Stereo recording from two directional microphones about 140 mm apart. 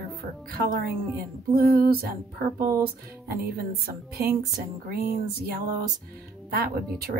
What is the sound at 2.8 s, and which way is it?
Speech, 90° right.